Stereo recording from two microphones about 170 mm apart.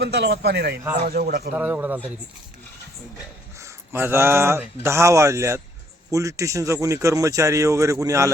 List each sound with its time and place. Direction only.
0.0 s a man's voice: 75° right (ahead or behind)
1.0 s a man's voice: 60° right (ahead or behind)
1.5 s speech: 10° right (ahead or behind)
3.6 s speech: 15° right (ahead or behind)